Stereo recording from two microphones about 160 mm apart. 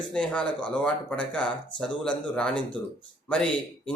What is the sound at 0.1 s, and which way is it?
Speech, 5° left (ahead or behind).